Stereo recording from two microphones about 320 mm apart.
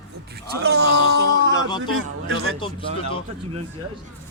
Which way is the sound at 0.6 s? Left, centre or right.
Right.